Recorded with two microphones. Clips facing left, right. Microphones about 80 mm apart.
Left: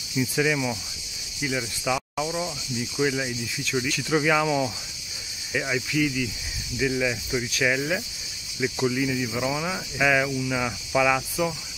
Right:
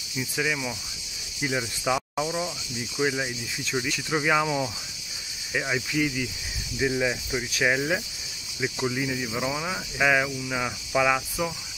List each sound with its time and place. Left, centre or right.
0.2 s speech: centre
1.6 s cricket: right
2.2 s speech: centre